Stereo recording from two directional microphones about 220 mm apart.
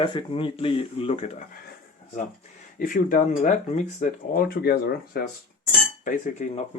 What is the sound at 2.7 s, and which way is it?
Speech, 40° left (ahead or behind).